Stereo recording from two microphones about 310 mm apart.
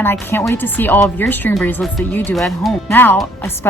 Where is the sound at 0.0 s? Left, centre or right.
Centre.